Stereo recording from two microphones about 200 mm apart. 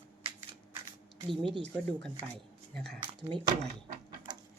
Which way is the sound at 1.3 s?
25° right (ahead or behind).